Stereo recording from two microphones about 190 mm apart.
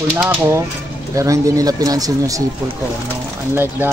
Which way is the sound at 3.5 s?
10° right (ahead or behind).